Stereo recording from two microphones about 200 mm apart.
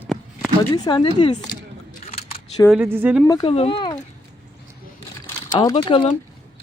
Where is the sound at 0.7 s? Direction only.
20° left (ahead or behind).